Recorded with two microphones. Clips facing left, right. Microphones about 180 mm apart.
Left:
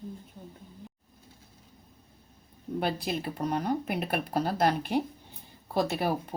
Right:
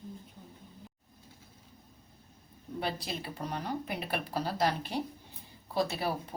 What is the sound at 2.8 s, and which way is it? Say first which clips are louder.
Speech: left 5 dB; 55° left (ahead or behind).